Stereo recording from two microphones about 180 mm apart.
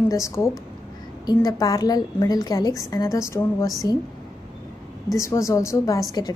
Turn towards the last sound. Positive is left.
turn(degrees=20)  # may be behind; listen again after turning